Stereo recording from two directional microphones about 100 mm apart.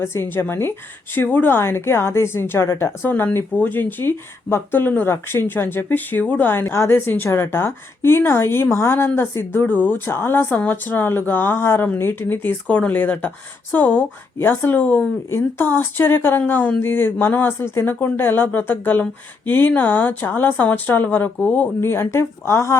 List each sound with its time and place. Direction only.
0.0 s a woman's voice: 25° left (ahead or behind)
21.8 s a woman's voice: 25° left (ahead or behind)